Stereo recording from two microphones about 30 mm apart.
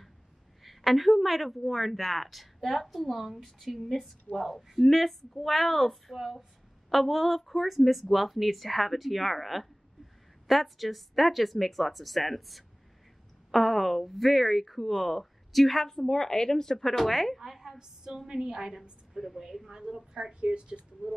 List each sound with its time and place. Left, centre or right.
0.7 s a woman's voice: centre
15.8 s speech: centre
17.7 s a woman's voice: right
18.8 s speech: centre
19.7 s a woman's voice: centre
20.4 s speech: right